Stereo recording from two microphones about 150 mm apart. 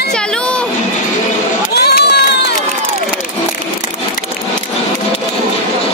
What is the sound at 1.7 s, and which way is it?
Crowd, 90° left.